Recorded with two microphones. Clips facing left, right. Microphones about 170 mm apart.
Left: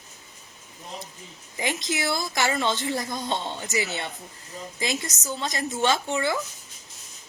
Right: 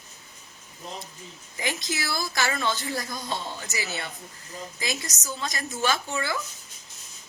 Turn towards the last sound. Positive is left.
turn(degrees=25)  # may be behind; listen again after turning